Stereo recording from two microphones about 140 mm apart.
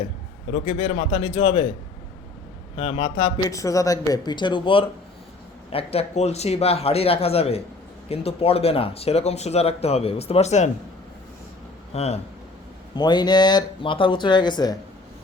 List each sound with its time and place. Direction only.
0.5 s speech: 45° left (ahead or behind)
2.7 s speech: 40° left (ahead or behind)
3.4 s speech: 25° left (ahead or behind); by 10.7 s 55° left (ahead or behind)
11.9 s speech: 50° left (ahead or behind)
13.0 s speech: 30° left (ahead or behind)